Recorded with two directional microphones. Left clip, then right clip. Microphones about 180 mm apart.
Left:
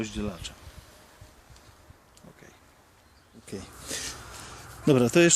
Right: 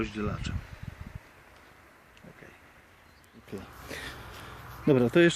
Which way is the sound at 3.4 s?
25° left (ahead or behind).